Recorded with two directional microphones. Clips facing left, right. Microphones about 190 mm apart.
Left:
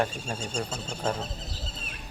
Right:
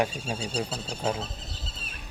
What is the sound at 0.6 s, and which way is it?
Speech, 35° right (ahead or behind).